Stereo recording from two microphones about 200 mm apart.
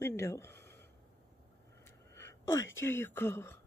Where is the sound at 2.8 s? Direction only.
10° left (ahead or behind).